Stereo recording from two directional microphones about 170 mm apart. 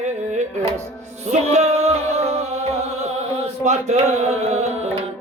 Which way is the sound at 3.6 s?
40° right (ahead or behind).